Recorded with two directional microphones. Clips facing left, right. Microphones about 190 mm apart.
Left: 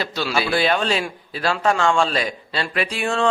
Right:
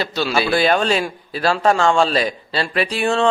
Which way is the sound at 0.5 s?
45° right (ahead or behind).